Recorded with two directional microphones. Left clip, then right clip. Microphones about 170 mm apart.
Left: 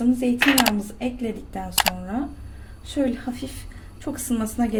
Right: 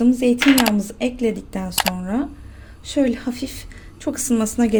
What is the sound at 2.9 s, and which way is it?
Speech, 60° right (ahead or behind).